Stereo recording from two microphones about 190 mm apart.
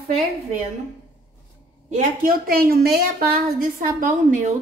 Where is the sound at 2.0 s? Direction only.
45° right (ahead or behind).